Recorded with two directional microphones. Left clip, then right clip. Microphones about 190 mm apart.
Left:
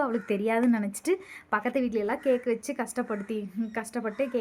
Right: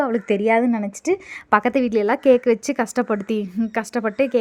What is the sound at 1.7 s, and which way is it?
Speech, 45° right (ahead or behind).